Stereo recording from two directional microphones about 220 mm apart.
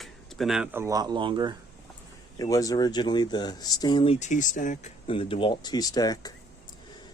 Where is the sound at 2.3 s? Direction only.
15° left (ahead or behind).